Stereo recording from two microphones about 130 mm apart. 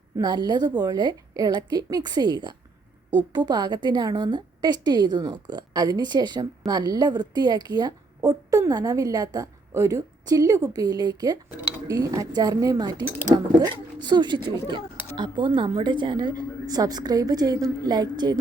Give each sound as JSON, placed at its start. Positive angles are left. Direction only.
{"t": 0.2, "sound": "a woman's voice", "side_deg": -35}